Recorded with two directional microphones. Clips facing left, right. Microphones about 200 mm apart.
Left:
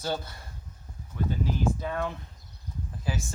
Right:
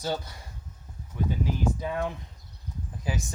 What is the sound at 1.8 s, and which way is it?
Speech, 15° right (ahead or behind).